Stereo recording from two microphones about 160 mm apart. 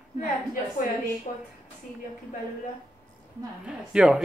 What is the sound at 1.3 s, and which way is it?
Speech, 50° left (ahead or behind).